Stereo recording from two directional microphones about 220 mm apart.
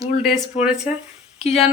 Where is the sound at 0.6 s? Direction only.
5° right (ahead or behind).